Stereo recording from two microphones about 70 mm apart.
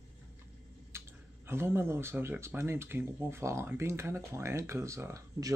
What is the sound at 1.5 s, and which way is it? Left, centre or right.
Speech, right.